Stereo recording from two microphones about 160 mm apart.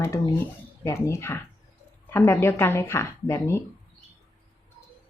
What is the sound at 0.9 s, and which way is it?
Speech, 15° left (ahead or behind).